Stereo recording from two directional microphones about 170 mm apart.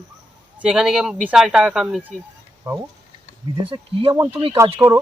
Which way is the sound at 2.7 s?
20° right (ahead or behind).